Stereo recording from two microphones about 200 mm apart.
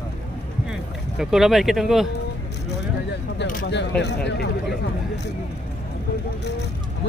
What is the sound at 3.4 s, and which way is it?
Single-lens reflex camera, 50° left (ahead or behind).